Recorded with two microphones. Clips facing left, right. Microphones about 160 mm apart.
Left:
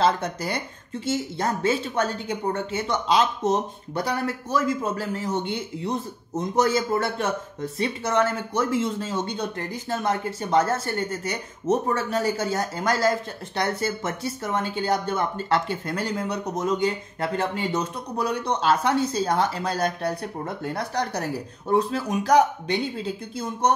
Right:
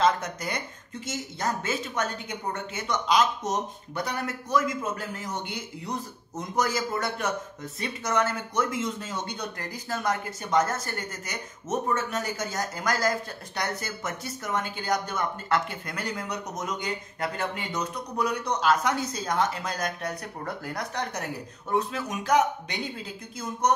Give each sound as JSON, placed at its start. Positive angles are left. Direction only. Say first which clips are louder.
{"t": 0.0, "sound": "speech", "louder": "left 2 dB", "side_deg": 30}